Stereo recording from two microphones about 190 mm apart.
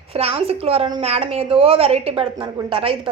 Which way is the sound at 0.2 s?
30° right (ahead or behind).